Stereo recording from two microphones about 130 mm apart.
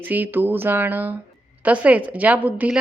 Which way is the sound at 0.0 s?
15° right (ahead or behind).